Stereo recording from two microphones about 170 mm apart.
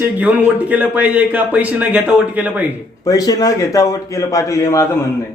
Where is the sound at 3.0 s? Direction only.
20° left (ahead or behind).